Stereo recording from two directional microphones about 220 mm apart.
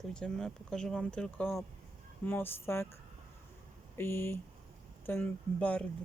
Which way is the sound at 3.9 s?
10° left (ahead or behind).